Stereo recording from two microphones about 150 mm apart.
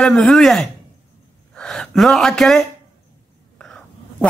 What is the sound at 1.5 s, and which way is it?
Gasp, 5° left (ahead or behind).